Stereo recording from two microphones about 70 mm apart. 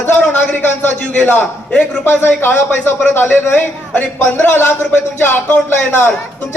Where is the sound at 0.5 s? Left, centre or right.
Left.